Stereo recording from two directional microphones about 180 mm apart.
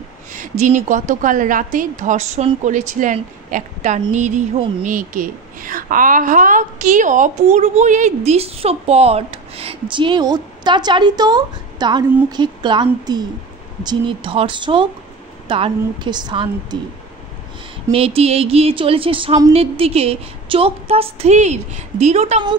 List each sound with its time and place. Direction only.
0.3 s a woman's voice: 45° right (ahead or behind); by 16.9 s 25° right (ahead or behind)
17.9 s a woman's voice: 35° right (ahead or behind)